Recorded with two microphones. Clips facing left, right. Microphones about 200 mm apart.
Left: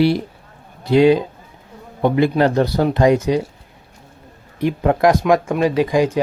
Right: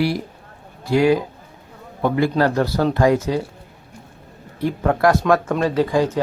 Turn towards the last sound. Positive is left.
turn(degrees=15)  # may be behind; listen again after turning